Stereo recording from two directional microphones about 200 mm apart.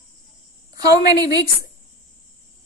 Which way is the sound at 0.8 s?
20° right (ahead or behind).